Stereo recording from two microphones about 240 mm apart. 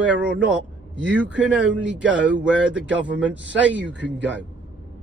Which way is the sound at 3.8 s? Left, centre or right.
Right.